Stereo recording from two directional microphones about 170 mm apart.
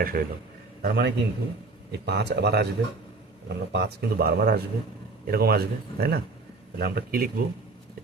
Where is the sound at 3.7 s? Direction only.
70° right (ahead or behind).